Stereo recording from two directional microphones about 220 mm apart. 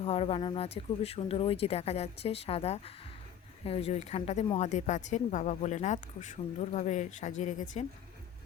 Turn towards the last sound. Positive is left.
turn(degrees=35)  # may be behind; listen again after turning